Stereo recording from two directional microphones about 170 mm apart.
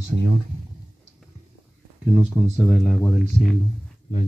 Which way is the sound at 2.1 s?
Centre (ahead or behind).